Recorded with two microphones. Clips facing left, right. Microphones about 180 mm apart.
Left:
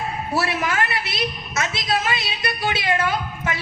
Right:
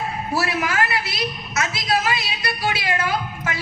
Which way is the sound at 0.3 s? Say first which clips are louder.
Even; 25° left (ahead or behind).